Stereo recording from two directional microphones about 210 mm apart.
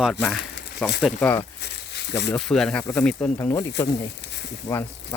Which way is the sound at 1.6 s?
50° left (ahead or behind).